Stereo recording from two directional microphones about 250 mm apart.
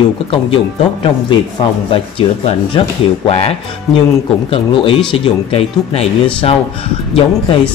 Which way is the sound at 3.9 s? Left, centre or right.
Centre.